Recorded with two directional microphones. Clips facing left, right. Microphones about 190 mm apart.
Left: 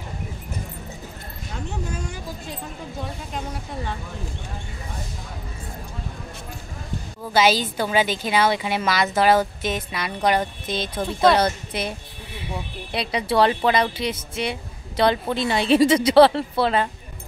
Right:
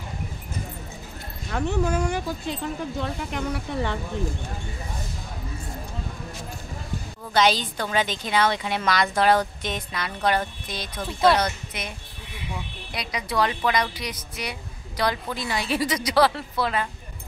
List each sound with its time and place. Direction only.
1.5 s speech: 65° right (ahead or behind)
7.3 s a woman's voice: 5° left (ahead or behind); by 16.9 s 30° left (ahead or behind)